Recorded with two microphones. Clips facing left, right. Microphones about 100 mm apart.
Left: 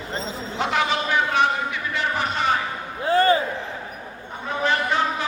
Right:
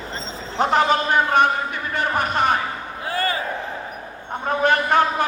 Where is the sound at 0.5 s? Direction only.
45° right (ahead or behind).